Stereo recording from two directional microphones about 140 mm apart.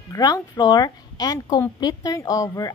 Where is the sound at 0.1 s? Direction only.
30° left (ahead or behind).